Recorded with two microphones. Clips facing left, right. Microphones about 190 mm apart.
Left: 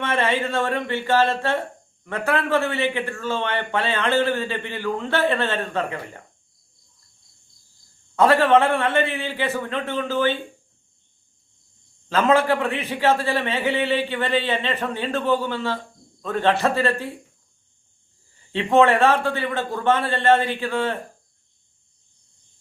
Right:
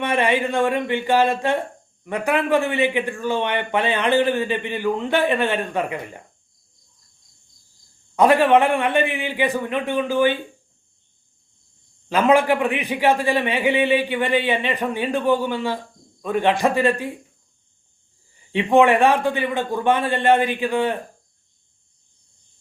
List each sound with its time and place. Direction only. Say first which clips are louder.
0.0 s a man's voice: right 2 dB; 15° right (ahead or behind)
8.1 s a man's voice: right 1 dB; 15° right (ahead or behind)
12.0 s a man's voice: right 2 dB; 15° right (ahead or behind)
18.5 s a man's voice: right 2 dB; 15° right (ahead or behind)